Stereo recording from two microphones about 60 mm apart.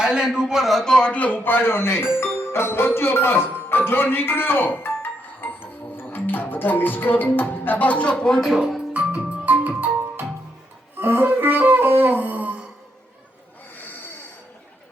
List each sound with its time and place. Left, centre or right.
0.0 s a man's voice: centre
0.9 s music: centre
8.4 s speech: centre
8.9 s music: right